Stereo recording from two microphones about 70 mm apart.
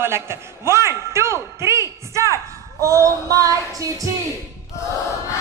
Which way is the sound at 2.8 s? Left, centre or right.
Right.